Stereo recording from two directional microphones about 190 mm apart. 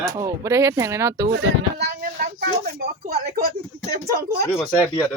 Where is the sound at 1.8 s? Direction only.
50° right (ahead or behind).